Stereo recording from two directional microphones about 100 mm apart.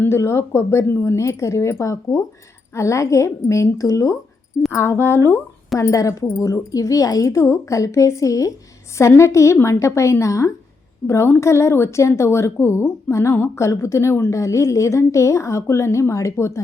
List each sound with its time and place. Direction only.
0.0 s a woman's voice: 25° left (ahead or behind)